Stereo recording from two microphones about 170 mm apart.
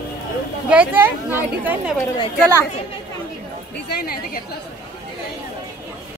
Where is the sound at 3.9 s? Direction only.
60° left (ahead or behind).